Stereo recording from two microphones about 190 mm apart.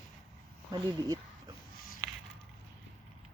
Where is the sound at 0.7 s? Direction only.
20° right (ahead or behind).